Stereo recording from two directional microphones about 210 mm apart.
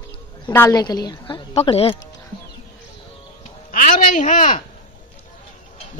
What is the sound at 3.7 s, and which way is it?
Speech, 40° left (ahead or behind).